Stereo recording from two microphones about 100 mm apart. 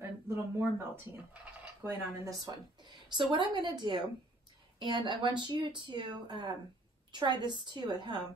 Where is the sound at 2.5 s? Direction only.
40° right (ahead or behind).